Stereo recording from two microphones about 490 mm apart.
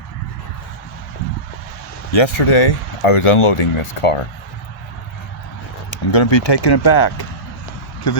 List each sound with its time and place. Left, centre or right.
2.1 s speech: left
5.9 s speech: left